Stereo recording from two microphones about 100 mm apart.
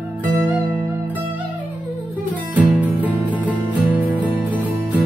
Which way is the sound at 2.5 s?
15° right (ahead or behind).